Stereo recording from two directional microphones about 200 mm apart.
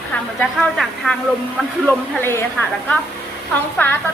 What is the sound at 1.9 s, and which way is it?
Speech, 10° left (ahead or behind).